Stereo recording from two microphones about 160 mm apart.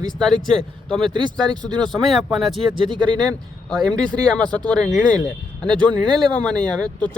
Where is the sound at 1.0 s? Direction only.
30° right (ahead or behind).